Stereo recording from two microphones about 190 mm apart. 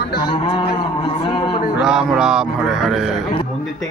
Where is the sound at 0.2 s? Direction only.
25° left (ahead or behind).